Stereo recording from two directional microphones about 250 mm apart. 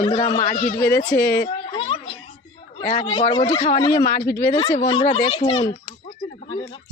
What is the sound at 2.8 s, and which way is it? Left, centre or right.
Speech, left.